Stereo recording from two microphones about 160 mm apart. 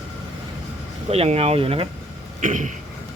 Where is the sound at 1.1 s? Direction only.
40° right (ahead or behind).